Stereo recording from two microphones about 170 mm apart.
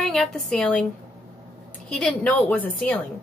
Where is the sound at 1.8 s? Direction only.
5° left (ahead or behind).